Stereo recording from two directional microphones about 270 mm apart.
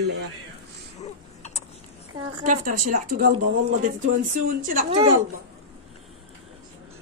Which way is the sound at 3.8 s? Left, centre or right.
Right.